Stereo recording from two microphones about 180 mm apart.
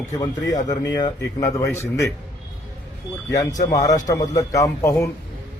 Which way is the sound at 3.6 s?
20° left (ahead or behind).